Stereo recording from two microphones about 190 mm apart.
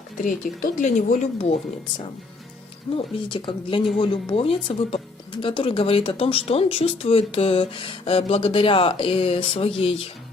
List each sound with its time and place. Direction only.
0.2 s speech: 45° left (ahead or behind)
2.9 s speech: 25° left (ahead or behind)